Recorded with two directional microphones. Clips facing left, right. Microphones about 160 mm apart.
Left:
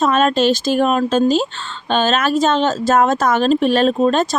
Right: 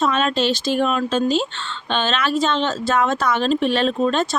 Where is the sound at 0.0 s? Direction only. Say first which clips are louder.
Left 5 dB; 45° left (ahead or behind).